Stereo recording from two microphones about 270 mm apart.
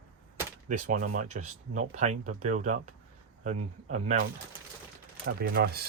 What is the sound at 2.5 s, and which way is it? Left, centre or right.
Speech, right.